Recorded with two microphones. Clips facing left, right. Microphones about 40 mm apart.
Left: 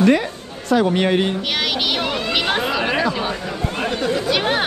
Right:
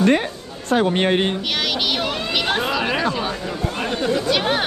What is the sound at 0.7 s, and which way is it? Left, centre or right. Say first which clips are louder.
Speech: left 1 dB; right.